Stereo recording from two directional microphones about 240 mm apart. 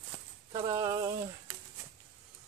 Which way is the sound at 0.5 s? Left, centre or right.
Centre.